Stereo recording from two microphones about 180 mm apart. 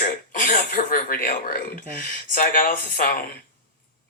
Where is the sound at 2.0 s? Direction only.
50° left (ahead or behind).